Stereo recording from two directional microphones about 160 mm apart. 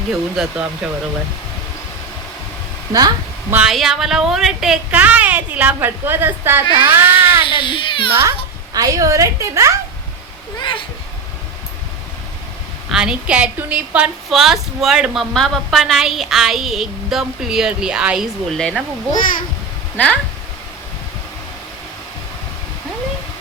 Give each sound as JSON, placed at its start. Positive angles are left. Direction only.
{"t": 0.1, "sound": "a woman's voice", "side_deg": -5}
{"t": 3.5, "sound": "a woman's voice", "side_deg": 0}
{"t": 7.4, "sound": "speech", "side_deg": 30}
{"t": 8.1, "sound": "a woman's voice", "side_deg": -15}
{"t": 10.6, "sound": "speech", "side_deg": 30}
{"t": 12.9, "sound": "a woman's voice", "side_deg": -5}
{"t": 19.1, "sound": "a child's voice", "side_deg": 55}
{"t": 20.0, "sound": "speech", "side_deg": 10}